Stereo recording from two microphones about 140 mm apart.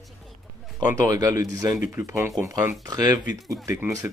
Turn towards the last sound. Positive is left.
turn(degrees=-25)  # may be behind; listen again after turning